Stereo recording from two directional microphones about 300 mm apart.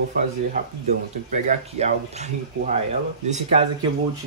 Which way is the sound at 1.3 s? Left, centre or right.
Right.